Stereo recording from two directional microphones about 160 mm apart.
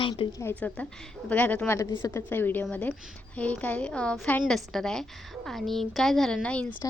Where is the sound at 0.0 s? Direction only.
30° left (ahead or behind).